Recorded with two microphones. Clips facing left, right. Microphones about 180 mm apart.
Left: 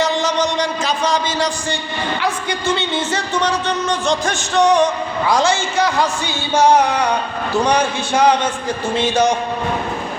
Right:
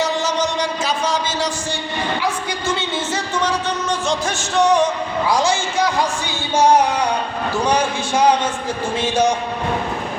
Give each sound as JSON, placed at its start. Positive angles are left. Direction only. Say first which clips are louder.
{"t": 0.0, "sound": "a sound", "louder": "left 2 dB", "side_deg": -5}
{"t": 2.6, "sound": "music", "louder": "left 3 dB", "side_deg": -5}
{"t": 7.7, "sound": "music", "louder": "left 1 dB", "side_deg": -10}